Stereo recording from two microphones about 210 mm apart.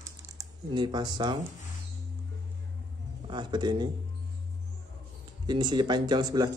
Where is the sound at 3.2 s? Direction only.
20° right (ahead or behind).